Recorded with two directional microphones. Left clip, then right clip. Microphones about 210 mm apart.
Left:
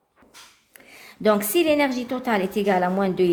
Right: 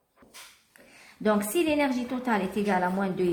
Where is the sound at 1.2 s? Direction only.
35° left (ahead or behind).